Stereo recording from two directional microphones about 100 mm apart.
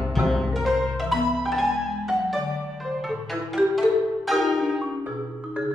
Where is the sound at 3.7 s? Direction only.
Centre (ahead or behind).